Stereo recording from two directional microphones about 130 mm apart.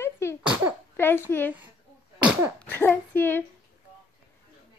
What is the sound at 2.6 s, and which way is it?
Speech, 15° left (ahead or behind).